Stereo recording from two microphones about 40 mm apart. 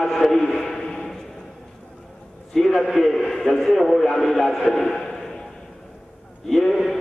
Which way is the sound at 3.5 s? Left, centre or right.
Centre.